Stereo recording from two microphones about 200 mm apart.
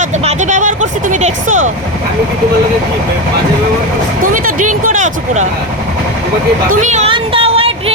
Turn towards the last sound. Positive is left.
turn(degrees=-30)  # may be behind; listen again after turning